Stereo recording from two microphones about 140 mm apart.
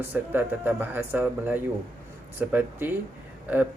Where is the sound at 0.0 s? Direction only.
15° right (ahead or behind).